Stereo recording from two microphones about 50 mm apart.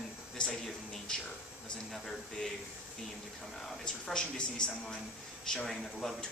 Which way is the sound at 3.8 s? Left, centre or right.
Centre.